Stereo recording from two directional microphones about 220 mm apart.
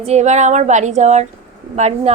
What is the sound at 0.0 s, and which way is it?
A woman's voice, 30° right (ahead or behind).